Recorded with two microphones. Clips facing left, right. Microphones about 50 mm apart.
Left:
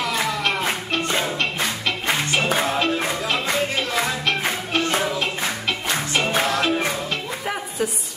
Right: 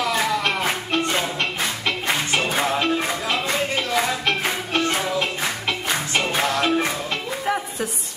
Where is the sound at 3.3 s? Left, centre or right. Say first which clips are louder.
Even; centre.